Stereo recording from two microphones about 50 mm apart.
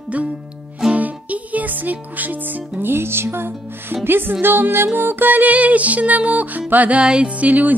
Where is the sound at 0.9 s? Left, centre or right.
Right.